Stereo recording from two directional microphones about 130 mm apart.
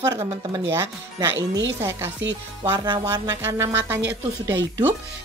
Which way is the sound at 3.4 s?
25° right (ahead or behind).